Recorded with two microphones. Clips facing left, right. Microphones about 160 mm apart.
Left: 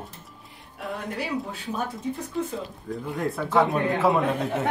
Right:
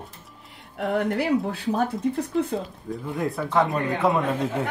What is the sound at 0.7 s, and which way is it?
A woman's voice, 75° right (ahead or behind).